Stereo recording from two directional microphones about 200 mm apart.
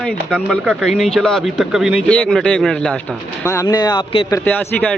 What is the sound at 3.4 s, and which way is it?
Speech, 15° left (ahead or behind).